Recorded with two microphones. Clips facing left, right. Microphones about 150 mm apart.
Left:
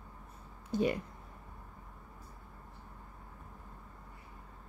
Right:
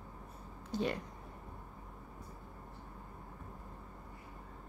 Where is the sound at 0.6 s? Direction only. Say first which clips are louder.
Left 4 dB; 10° left (ahead or behind).